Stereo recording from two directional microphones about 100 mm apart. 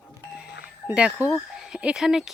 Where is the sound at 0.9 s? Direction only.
15° right (ahead or behind).